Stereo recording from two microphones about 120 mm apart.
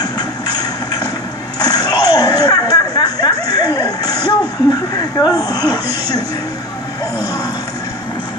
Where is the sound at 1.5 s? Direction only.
30° left (ahead or behind).